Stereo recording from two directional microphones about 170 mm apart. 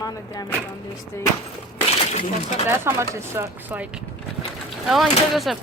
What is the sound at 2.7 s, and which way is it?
Speech, 15° right (ahead or behind).